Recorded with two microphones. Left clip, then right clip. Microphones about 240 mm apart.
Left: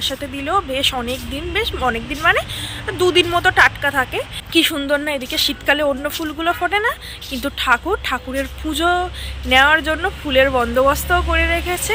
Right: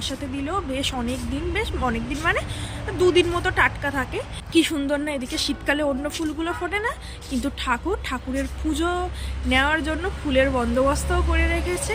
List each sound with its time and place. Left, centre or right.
0.0 s speech: centre